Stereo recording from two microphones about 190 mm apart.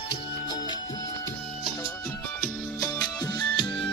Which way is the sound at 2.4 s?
20° left (ahead or behind).